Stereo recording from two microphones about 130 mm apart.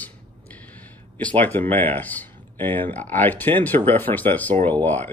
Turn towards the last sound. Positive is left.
turn(degrees=15)  # may be behind; listen again after turning